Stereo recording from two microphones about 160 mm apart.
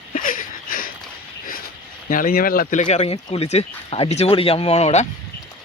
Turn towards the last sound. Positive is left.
turn(degrees=40)  # may be behind; listen again after turning